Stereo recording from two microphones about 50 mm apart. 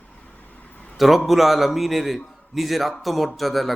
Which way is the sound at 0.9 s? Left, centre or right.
Centre.